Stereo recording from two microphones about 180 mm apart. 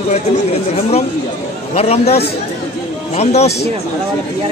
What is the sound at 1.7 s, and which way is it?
A man's voice, 35° left (ahead or behind).